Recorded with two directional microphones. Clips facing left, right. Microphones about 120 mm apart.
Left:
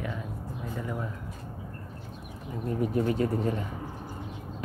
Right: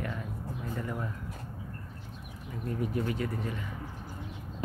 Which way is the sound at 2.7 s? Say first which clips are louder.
Left 6 dB; 30° left (ahead or behind).